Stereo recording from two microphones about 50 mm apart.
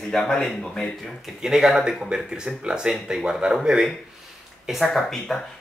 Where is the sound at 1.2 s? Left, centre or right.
Centre.